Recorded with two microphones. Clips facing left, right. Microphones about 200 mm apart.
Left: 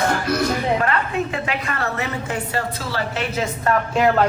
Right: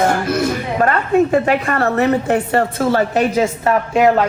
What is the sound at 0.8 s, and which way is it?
A woman's voice, 45° right (ahead or behind).